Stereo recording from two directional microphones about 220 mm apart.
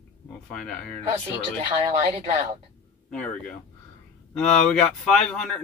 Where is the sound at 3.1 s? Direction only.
5° left (ahead or behind).